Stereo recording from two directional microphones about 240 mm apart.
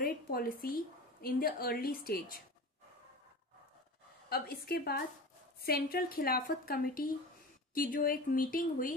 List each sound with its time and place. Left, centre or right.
0.0 s a woman's voice: left
4.3 s a woman's voice: left